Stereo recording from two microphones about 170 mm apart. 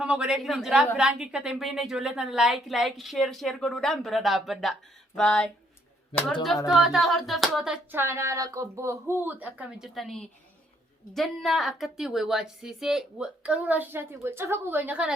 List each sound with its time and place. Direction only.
0.0 s a woman's voice: 5° right (ahead or behind)
6.1 s speech: 30° left (ahead or behind)
6.7 s a woman's voice: centre (ahead or behind)